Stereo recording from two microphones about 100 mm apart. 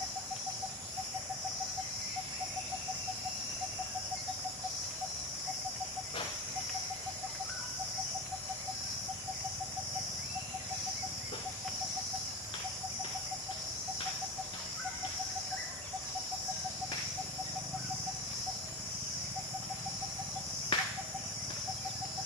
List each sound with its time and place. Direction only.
20.7 s cricket: 65° left (ahead or behind)